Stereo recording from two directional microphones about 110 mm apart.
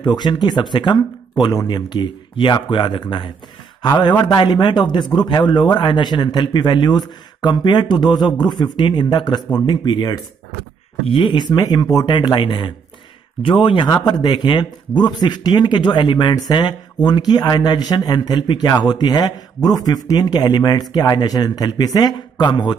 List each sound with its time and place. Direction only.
0.0 s a man's voice: 40° left (ahead or behind)
11.1 s a man's voice: 50° left (ahead or behind); by 12.2 s 35° left (ahead or behind)
12.2 s a man's voice: 45° left (ahead or behind)